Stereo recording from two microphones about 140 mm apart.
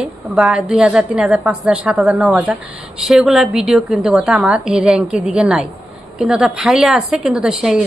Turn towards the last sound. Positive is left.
turn(degrees=-5)  # may be behind; listen again after turning